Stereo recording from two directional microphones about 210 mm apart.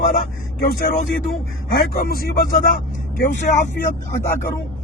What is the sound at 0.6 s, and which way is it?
Speech, 40° left (ahead or behind).